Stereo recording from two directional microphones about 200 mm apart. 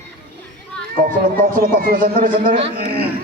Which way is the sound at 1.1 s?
40° right (ahead or behind).